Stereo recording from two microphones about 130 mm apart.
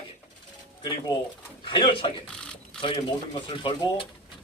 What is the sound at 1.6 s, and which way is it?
Speech, 40° left (ahead or behind).